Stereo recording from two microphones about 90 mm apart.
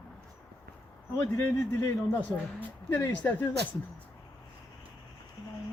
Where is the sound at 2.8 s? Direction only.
25° left (ahead or behind).